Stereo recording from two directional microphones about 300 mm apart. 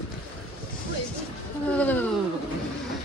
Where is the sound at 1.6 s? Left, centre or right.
Centre.